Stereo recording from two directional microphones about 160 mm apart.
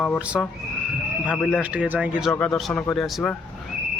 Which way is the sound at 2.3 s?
5° left (ahead or behind).